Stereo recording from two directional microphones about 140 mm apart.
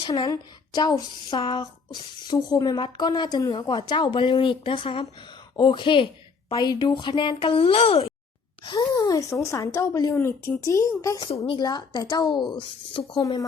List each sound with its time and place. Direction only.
0.1 s speech: 30° left (ahead or behind)
8.6 s a woman's voice: 30° left (ahead or behind)
13.1 s a woman's voice: 25° left (ahead or behind)